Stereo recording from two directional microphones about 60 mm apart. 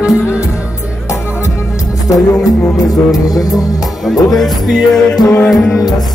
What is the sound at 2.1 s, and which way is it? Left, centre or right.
Music, left.